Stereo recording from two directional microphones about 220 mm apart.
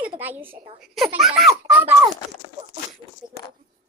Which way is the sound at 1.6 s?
10° right (ahead or behind).